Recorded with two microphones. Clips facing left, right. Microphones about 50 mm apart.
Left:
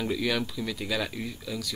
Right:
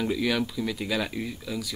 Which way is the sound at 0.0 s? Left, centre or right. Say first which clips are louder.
Right 2 dB; centre.